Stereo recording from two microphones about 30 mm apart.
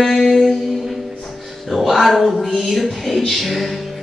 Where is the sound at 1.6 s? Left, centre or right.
Centre.